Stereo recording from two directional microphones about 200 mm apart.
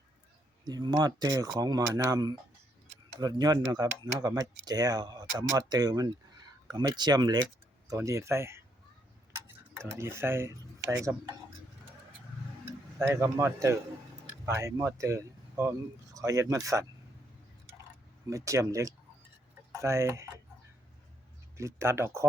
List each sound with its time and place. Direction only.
0.6 s speech: 20° right (ahead or behind)
9.3 s tick-tock: 15° right (ahead or behind)
10.0 s speech: 15° right (ahead or behind)
13.0 s speech: 15° right (ahead or behind)
18.3 s speech: 15° right (ahead or behind)
21.6 s speech: 15° right (ahead or behind)